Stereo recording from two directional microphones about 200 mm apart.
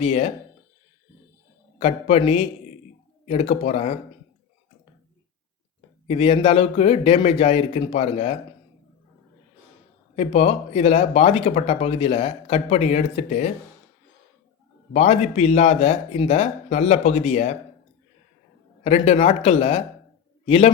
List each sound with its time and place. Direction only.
0.0 s speech: 35° left (ahead or behind)
1.8 s a man's voice: 30° left (ahead or behind)
6.1 s a man's voice: 30° left (ahead or behind)
10.2 s speech: 30° left (ahead or behind)
14.9 s speech: 35° left (ahead or behind)
18.8 s a man's voice: 30° left (ahead or behind)